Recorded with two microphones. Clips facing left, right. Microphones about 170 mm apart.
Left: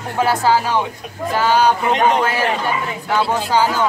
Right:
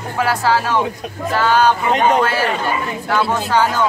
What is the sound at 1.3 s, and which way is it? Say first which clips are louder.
Speech: right 1 dB; 15° left (ahead or behind).